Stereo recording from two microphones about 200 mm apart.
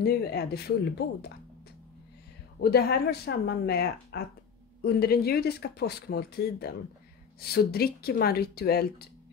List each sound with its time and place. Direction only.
0.0 s speech: 55° left (ahead or behind)
2.6 s speech: 55° left (ahead or behind)